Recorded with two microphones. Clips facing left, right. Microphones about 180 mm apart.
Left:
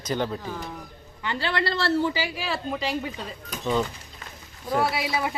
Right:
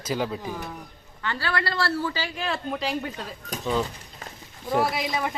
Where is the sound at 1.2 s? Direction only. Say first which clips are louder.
Left 1 dB; 15° left (ahead or behind); by 3.3 s centre (ahead or behind).